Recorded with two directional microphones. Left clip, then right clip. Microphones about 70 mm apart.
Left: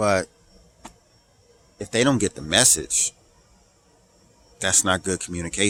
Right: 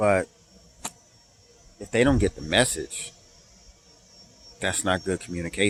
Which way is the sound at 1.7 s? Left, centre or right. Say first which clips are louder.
Left 1 dB; left.